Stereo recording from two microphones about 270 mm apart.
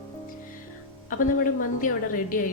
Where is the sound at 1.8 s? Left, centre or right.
Left.